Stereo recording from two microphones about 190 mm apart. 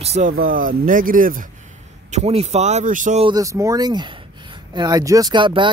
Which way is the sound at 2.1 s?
35° right (ahead or behind).